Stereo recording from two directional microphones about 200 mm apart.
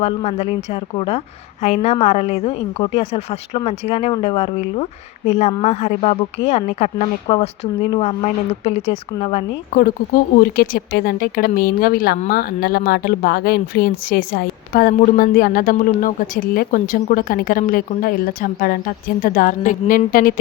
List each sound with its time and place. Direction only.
0.0 s speech: 30° left (ahead or behind)
10.4 s speech: 45° left (ahead or behind)